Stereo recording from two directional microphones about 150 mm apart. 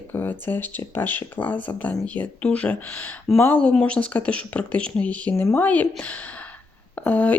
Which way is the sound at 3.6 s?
5° left (ahead or behind).